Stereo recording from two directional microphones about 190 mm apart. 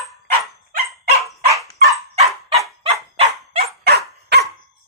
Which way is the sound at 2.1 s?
35° right (ahead or behind).